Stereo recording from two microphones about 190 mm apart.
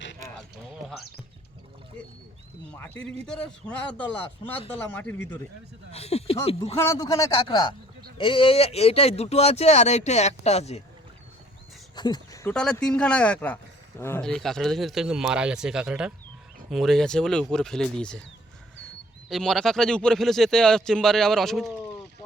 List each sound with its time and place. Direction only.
2.7 s a man's voice: 10° left (ahead or behind)
5.9 s speech: 35° left (ahead or behind)
6.7 s a man's voice: 15° left (ahead or behind); by 10.8 s 35° left (ahead or behind)
11.9 s speech: 20° left (ahead or behind)
12.5 s speech: 5° left (ahead or behind)
19.3 s speech: centre (ahead or behind)